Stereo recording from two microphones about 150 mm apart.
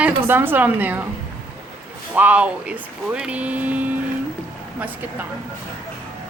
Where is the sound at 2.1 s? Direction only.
10° right (ahead or behind).